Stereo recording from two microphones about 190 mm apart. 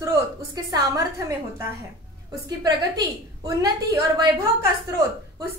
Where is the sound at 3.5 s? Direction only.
20° right (ahead or behind).